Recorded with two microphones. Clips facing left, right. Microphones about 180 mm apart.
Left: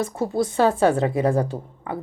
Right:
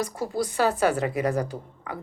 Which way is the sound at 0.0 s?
25° left (ahead or behind).